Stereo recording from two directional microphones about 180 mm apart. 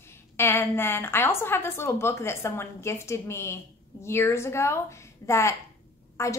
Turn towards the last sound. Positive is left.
turn(degrees=15)  # may be behind; listen again after turning